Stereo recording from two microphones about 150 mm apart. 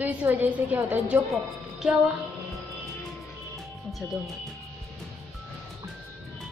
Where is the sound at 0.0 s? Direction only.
10° right (ahead or behind).